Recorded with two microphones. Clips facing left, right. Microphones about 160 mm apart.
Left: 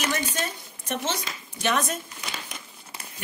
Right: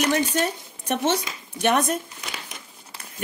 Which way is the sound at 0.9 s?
65° right (ahead or behind).